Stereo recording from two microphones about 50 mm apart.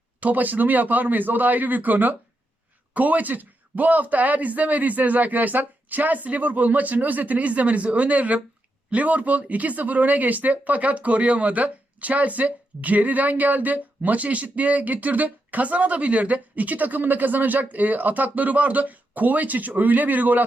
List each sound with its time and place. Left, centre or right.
0.2 s speech: right